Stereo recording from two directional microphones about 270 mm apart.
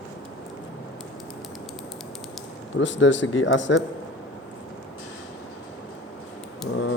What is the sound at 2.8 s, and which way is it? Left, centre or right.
A man's voice, left.